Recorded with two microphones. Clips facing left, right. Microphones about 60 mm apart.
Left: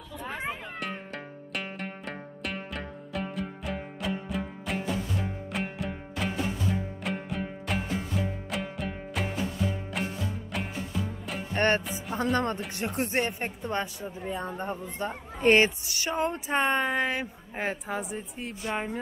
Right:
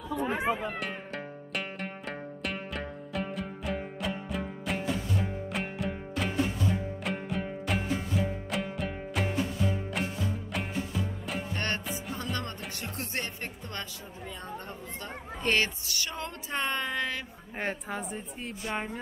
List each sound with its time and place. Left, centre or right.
0.1 s cat: centre
0.7 s music: centre
11.5 s music: left
12.7 s a woman's voice: left
17.6 s a woman's voice: centre